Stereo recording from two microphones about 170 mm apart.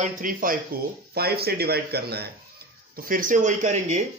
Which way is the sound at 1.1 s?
65° right (ahead or behind).